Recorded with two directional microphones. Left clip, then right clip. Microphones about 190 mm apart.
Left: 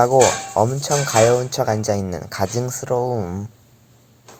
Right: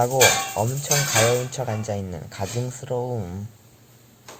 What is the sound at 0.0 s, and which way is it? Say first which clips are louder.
Speech: left 4 dB; 35° left (ahead or behind).